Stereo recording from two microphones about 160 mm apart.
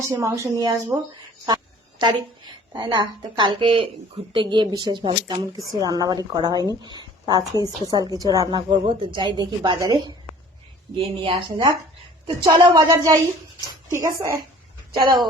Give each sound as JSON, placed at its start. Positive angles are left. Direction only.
{"t": 0.1, "sound": "a woman's voice", "side_deg": -20}
{"t": 2.0, "sound": "a woman's voice", "side_deg": -25}
{"t": 6.8, "sound": "a sound", "side_deg": -25}
{"t": 7.6, "sound": "a woman's voice", "side_deg": -25}